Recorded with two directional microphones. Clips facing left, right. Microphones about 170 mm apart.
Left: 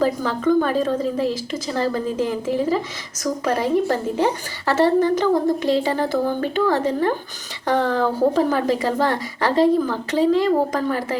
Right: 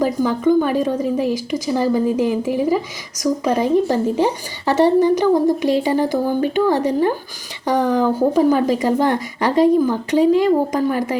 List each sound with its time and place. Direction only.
0.0 s a woman's voice: 15° right (ahead or behind)